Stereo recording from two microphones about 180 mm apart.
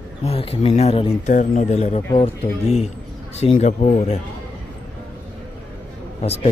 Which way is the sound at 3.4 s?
35° left (ahead or behind).